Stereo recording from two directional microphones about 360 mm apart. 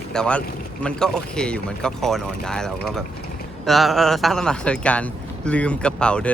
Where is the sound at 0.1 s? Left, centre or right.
Centre.